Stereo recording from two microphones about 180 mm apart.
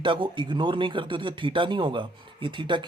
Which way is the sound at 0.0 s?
25° right (ahead or behind).